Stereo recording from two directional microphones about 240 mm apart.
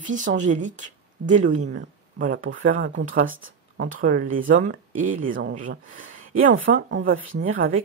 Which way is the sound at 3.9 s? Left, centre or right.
Right.